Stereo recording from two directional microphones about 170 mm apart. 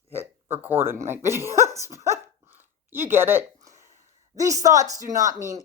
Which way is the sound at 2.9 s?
15° right (ahead or behind).